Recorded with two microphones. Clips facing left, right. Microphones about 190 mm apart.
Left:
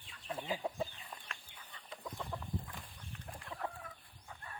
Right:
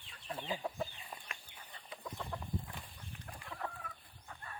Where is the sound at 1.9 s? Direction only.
Centre (ahead or behind).